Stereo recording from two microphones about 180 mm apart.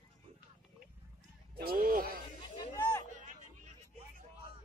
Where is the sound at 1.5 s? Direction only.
55° right (ahead or behind).